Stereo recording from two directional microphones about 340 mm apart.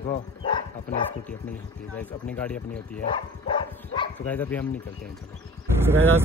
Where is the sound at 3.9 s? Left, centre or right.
Centre.